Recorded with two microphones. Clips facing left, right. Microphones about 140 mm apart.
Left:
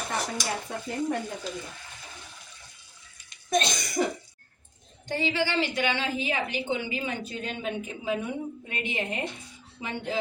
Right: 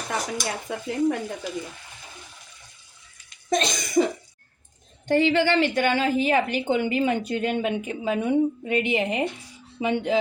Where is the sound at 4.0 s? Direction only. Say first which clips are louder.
Right 6 dB; 90° right.